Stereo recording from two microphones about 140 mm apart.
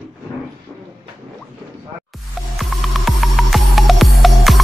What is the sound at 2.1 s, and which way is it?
Music, centre (ahead or behind).